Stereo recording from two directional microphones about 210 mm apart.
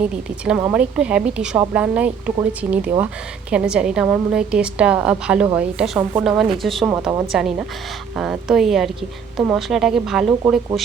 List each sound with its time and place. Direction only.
0.0 s a woman's voice: 5° right (ahead or behind)
6.9 s a woman's voice: 10° right (ahead or behind)
7.3 s a woman's voice: centre (ahead or behind)